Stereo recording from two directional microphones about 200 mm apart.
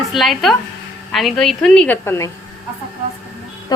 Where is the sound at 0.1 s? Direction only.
Centre (ahead or behind).